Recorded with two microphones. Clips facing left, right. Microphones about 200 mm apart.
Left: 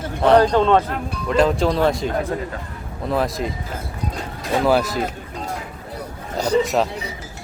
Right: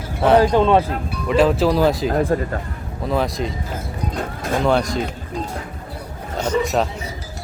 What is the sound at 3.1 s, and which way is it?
Speech, centre (ahead or behind).